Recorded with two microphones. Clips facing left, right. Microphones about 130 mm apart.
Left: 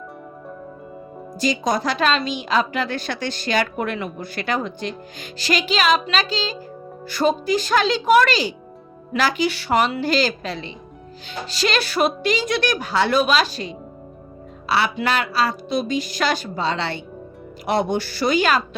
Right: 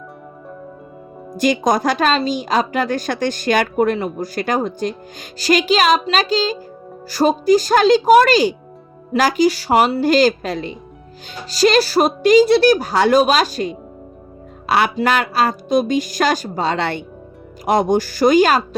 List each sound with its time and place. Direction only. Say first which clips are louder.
1.4 s a woman's voice: right 5 dB; 50° right (ahead or behind)